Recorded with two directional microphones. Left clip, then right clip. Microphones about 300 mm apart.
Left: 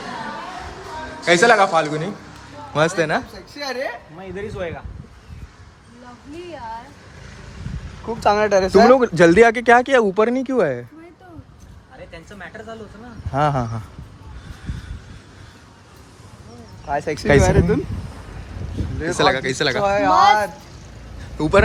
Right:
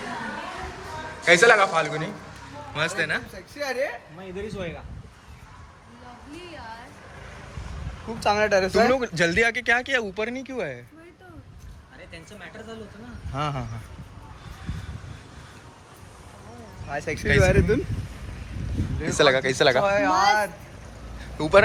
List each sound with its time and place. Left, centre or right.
1.2 s speech: centre
4.4 s speech: left
8.2 s speech: left
13.3 s speech: left
16.9 s speech: left
19.1 s speech: centre
21.2 s vehicle: centre